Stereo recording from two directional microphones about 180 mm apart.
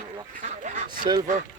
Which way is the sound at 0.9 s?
25° right (ahead or behind).